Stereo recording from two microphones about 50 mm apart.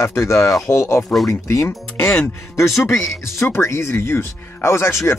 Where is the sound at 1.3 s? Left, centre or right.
Left.